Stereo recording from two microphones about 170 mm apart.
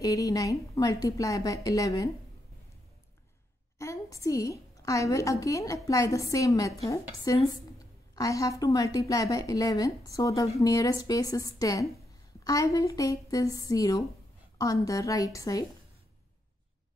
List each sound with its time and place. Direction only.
0.0 s a woman's voice: 20° left (ahead or behind)
3.7 s a woman's voice: 15° left (ahead or behind)